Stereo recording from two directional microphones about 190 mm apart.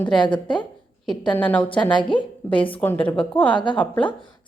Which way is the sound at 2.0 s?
25° left (ahead or behind).